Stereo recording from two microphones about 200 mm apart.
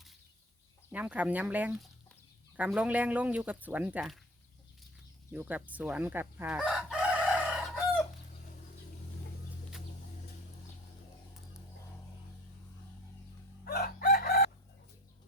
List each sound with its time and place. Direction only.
0.9 s speech: 10° right (ahead or behind)
5.3 s chicken: 5° right (ahead or behind)
13.7 s chicken: 50° left (ahead or behind)